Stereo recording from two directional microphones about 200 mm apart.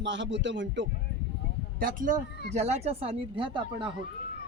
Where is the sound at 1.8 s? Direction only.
40° right (ahead or behind).